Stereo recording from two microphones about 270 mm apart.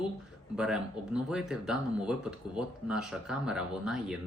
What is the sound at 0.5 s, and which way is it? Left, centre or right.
Speech, centre.